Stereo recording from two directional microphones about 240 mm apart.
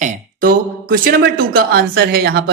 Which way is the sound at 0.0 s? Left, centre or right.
Right.